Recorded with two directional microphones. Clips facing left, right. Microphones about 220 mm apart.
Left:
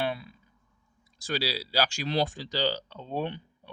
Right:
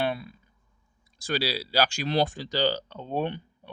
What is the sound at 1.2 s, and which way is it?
Speech, 55° right (ahead or behind).